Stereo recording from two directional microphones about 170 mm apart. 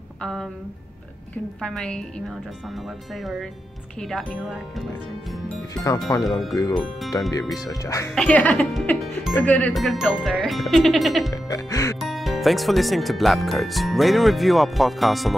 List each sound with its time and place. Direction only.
0.2 s speech: 5° left (ahead or behind)
1.6 s speech: 5° left (ahead or behind)
6.1 s speech: 15° left (ahead or behind)
8.1 s speech: 5° left (ahead or behind)
11.4 s speech: 20° left (ahead or behind)
12.0 s speech: centre (ahead or behind)